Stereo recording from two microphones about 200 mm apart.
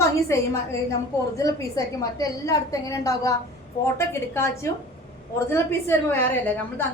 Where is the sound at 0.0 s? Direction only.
15° left (ahead or behind).